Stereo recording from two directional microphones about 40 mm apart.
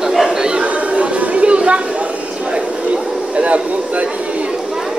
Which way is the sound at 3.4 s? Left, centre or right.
Right.